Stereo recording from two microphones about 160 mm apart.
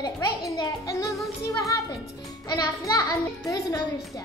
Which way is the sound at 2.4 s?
20° left (ahead or behind).